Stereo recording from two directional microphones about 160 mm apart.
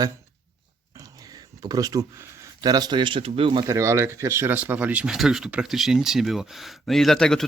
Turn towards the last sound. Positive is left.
turn(degrees=5)  # may be behind; listen again after turning